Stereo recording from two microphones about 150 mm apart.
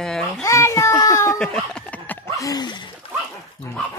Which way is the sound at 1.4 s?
5° left (ahead or behind).